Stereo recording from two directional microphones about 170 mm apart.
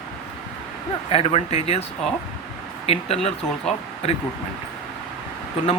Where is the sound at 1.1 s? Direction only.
35° left (ahead or behind).